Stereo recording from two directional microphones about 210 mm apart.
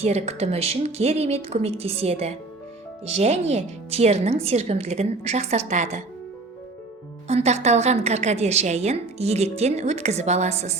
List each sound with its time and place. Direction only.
0.0 s a woman's voice: 30° right (ahead or behind)
7.3 s a woman's voice: 30° right (ahead or behind)